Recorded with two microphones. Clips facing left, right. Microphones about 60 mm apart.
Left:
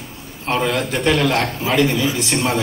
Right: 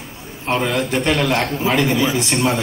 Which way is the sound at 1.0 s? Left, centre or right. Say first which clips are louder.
Left 2 dB; centre.